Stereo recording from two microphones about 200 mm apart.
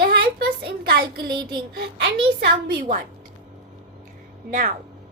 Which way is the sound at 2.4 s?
55° right (ahead or behind).